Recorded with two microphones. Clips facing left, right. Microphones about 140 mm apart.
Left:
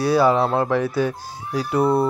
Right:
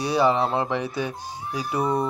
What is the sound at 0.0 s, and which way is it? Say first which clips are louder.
Speech: left 4 dB; 15° right (ahead or behind).